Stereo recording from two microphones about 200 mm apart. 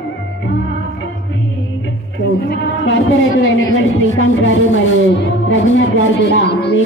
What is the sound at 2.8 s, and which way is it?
Speech, 70° left (ahead or behind).